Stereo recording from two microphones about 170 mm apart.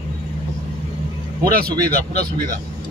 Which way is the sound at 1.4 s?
60° right (ahead or behind).